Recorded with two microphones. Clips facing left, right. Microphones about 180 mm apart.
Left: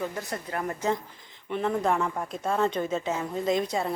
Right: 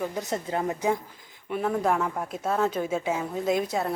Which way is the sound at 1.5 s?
5° right (ahead or behind).